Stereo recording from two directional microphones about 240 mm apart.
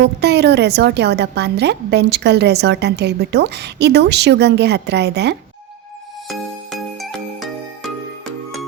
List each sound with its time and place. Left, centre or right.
0.0 s a woman's voice: right
6.2 s music: centre